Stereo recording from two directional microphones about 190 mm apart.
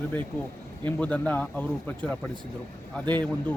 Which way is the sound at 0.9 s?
10° left (ahead or behind).